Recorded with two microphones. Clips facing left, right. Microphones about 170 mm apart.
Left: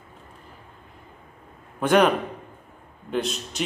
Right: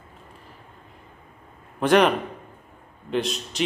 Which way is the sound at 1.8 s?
Centre (ahead or behind).